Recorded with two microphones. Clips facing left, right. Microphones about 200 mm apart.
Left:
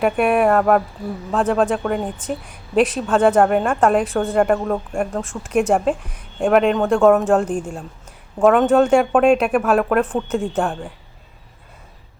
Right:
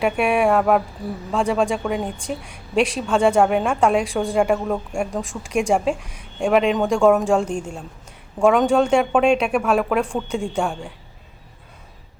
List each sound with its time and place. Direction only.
0.0 s a woman's voice: centre (ahead or behind)